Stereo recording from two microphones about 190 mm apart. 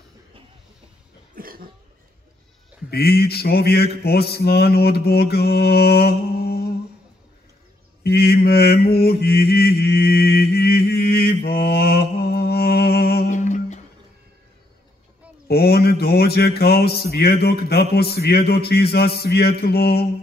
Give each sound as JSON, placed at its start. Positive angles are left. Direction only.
{"t": 1.3, "sound": "cough", "side_deg": -50}
{"t": 2.9, "sound": "mantra", "side_deg": 55}
{"t": 8.0, "sound": "mantra", "side_deg": 55}
{"t": 13.3, "sound": "humming", "side_deg": 40}
{"t": 15.4, "sound": "mantra", "side_deg": 55}